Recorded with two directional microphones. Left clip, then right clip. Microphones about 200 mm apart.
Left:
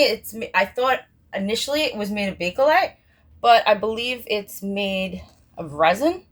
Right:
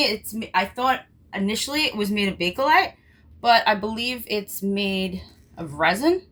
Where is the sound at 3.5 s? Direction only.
25° left (ahead or behind).